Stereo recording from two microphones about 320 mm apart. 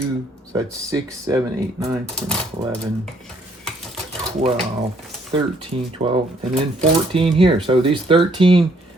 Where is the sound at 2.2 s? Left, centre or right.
Centre.